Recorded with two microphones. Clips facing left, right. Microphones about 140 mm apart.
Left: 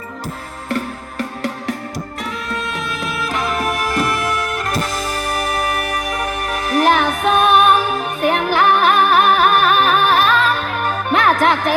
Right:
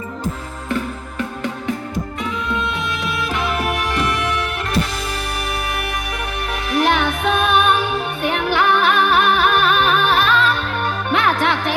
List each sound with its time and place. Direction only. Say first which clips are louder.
3.2 s music: left 2 dB; 40° left (ahead or behind)